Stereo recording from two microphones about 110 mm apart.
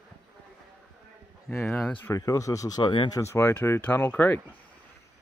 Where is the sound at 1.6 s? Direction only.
5° left (ahead or behind).